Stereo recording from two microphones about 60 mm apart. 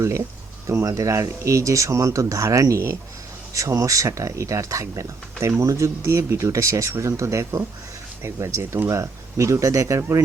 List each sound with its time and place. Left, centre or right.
0.9 s speech: right